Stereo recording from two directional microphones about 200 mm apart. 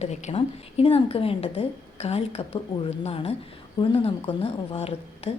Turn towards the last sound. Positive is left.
turn(degrees=30)  # may be behind; listen again after turning